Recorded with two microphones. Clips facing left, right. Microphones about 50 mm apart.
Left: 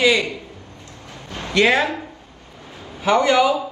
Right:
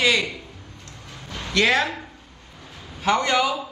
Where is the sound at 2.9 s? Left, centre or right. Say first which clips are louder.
Left 5 dB; centre.